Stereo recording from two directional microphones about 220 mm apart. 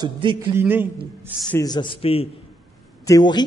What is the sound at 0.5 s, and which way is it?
Speech, 10° right (ahead or behind).